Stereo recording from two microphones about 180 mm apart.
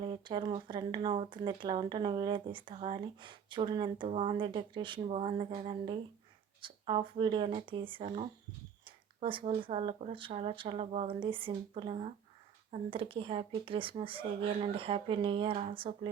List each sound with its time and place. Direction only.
0.0 s speech: 25° right (ahead or behind)